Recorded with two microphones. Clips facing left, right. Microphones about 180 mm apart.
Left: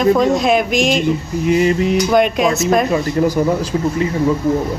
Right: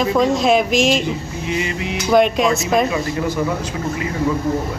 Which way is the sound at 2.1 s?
Centre (ahead or behind).